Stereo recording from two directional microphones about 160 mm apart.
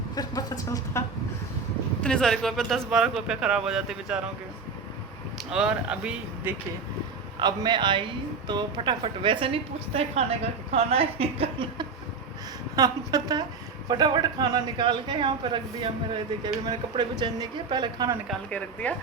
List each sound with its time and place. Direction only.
0.2 s speech: 25° left (ahead or behind)
2.0 s a man's voice: 5° left (ahead or behind)
5.5 s speech: 5° right (ahead or behind)
7.3 s a woman's voice: 25° right (ahead or behind)
12.7 s speech: 25° right (ahead or behind)
18.3 s speech: 10° left (ahead or behind)